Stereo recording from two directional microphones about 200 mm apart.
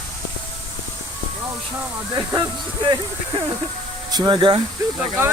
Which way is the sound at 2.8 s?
25° right (ahead or behind).